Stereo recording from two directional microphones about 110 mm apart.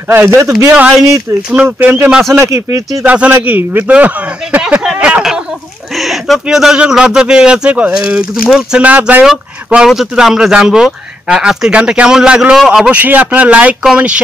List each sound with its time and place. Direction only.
0.1 s speech: 20° right (ahead or behind)
2.4 s speech: 30° right (ahead or behind)
3.0 s speech: 15° right (ahead or behind)